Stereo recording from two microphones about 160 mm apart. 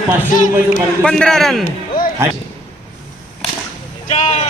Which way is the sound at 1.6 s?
60° left (ahead or behind).